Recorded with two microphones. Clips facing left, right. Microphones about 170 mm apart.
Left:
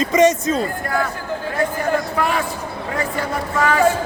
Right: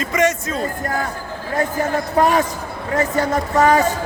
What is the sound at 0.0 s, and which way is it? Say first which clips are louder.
Speech: left 4 dB; 20° left (ahead or behind).